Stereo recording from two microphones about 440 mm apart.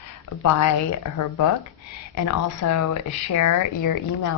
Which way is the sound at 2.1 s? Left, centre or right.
Left.